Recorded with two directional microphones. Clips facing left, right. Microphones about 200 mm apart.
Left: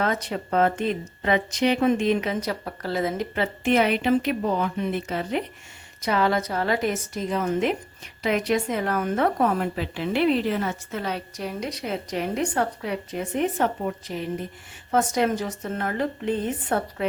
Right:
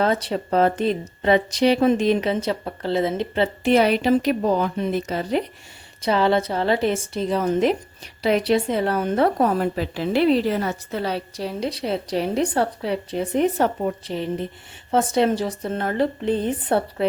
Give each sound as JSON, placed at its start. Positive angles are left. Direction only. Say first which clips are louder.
{"t": 0.0, "sound": "a woman's voice", "louder": "right 4 dB", "side_deg": -35}